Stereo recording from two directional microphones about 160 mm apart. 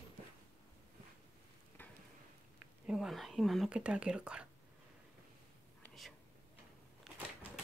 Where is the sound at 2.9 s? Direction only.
Centre (ahead or behind).